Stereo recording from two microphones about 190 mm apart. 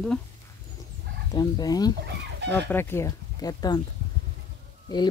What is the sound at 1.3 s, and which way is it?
Speech, 20° left (ahead or behind).